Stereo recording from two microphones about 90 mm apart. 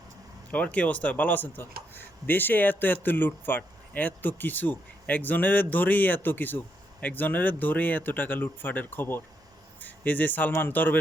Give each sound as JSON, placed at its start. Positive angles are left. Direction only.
{"t": 0.5, "sound": "speech", "side_deg": 15}